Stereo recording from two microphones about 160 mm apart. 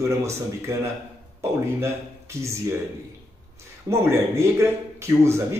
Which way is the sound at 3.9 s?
15° right (ahead or behind).